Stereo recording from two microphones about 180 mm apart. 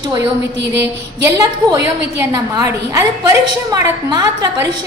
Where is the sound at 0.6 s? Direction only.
75° right (ahead or behind).